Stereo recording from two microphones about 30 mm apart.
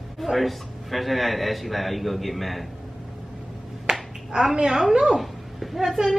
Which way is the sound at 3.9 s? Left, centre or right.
Right.